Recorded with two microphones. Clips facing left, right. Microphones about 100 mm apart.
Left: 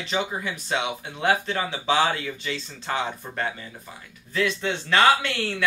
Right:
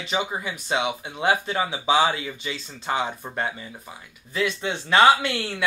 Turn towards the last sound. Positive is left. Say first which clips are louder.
# even
turn(degrees=-15)  # may be behind; listen again after turning